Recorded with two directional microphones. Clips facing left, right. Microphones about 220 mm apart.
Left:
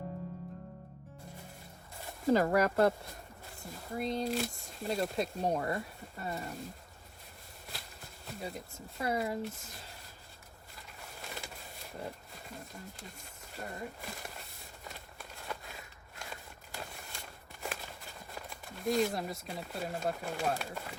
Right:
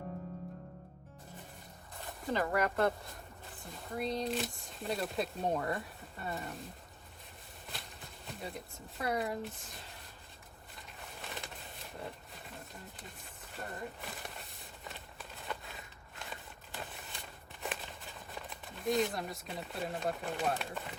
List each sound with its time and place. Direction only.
2.2 s speech: 40° left (ahead or behind)
3.7 s speech: centre (ahead or behind)
7.7 s speech: centre (ahead or behind)
11.2 s a sound: centre (ahead or behind)
13.0 s speech: centre (ahead or behind)
14.8 s run: centre (ahead or behind)
16.3 s a sound: centre (ahead or behind)
17.6 s speech: centre (ahead or behind)